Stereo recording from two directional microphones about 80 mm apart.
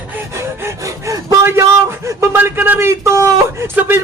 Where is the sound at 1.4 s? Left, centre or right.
Right.